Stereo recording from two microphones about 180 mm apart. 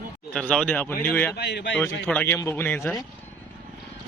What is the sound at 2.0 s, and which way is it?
Speech, 10° left (ahead or behind).